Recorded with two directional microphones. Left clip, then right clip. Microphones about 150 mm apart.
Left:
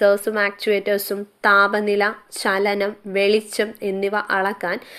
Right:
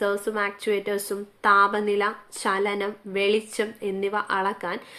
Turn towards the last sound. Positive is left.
turn(degrees=45)  # may be behind; listen again after turning